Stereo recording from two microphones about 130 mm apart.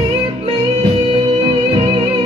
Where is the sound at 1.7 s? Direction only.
40° right (ahead or behind).